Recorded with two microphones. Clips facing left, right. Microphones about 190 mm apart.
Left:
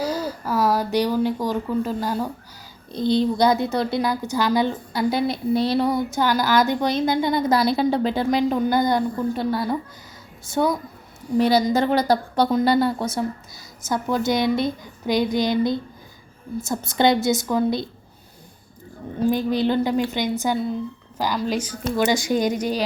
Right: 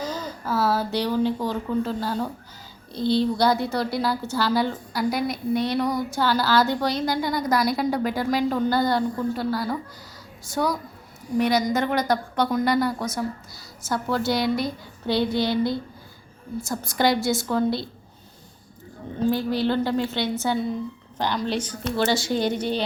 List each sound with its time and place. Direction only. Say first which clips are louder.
0.0 s a woman's voice: left 5 dB; 10° left (ahead or behind)
19.3 s speech: left 2 dB; 20° left (ahead or behind)